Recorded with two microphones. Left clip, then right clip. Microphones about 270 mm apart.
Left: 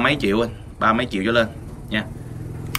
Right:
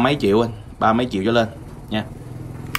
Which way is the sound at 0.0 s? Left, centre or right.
Centre.